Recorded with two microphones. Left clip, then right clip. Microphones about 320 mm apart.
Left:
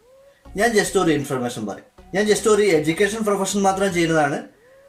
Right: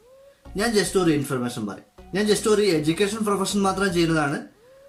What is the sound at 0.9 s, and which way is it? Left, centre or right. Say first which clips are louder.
A man's voice: left 2 dB; left.